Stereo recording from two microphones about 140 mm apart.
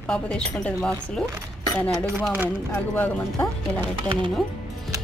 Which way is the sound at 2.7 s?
15° left (ahead or behind).